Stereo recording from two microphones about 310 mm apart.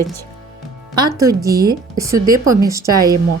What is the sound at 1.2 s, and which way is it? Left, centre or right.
Speech, centre.